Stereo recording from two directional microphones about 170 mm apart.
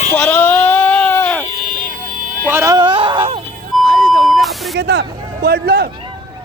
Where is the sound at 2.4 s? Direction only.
15° right (ahead or behind).